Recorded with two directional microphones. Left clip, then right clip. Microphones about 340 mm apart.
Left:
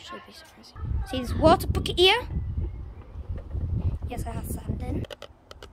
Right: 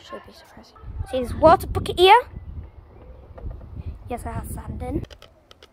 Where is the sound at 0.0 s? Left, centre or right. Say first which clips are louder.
Right 2 dB; centre.